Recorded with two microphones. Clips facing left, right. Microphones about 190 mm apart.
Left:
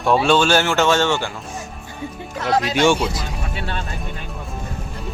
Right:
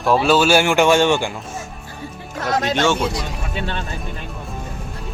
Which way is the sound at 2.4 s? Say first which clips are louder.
Left 1 dB; 45° right (ahead or behind).